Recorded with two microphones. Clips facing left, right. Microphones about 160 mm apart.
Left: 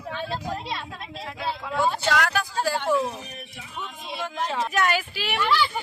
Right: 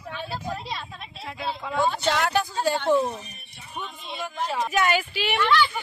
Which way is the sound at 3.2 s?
90° left.